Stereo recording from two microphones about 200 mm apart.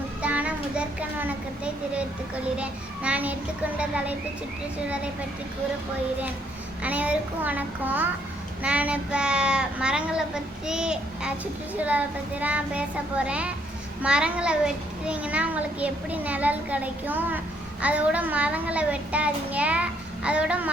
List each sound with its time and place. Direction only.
0.2 s a child's voice: 5° right (ahead or behind)
6.8 s a child's voice: 5° right (ahead or behind)